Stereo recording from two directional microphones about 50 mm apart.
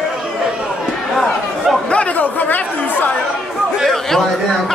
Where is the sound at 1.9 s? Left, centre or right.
Left.